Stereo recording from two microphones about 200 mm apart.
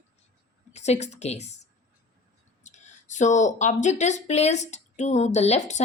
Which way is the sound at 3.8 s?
35° left (ahead or behind).